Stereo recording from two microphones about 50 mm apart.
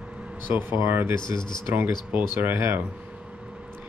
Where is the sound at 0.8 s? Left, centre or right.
Right.